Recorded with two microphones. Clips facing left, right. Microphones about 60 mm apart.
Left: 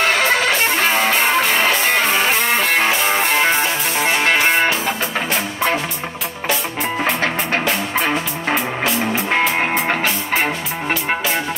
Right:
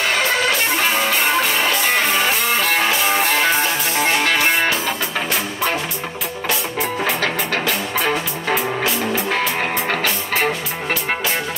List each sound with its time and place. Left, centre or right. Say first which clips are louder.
0.7 s music: left 2 dB; left
4.2 s music: left 2 dB; left
7.2 s music: left 1 dB; left